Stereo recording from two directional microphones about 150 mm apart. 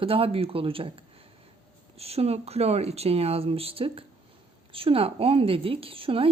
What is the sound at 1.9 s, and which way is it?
A woman's voice, 40° right (ahead or behind).